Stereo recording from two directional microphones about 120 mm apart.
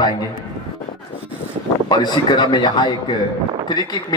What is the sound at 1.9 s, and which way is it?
A man's voice, 35° left (ahead or behind).